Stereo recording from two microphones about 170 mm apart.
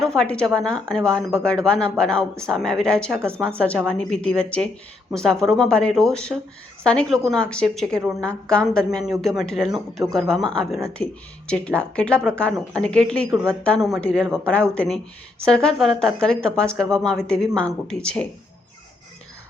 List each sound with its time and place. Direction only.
0.0 s speech: 5° left (ahead or behind)
3.2 s speech: 15° right (ahead or behind)
3.6 s a woman's voice: 5° left (ahead or behind)
9.6 s speech: 25° right (ahead or behind)
10.1 s speech: centre (ahead or behind)